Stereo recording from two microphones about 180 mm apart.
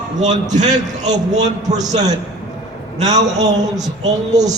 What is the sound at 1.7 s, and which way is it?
Speech, 20° right (ahead or behind).